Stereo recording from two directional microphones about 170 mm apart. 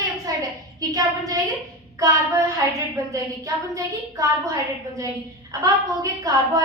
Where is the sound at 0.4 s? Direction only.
20° right (ahead or behind).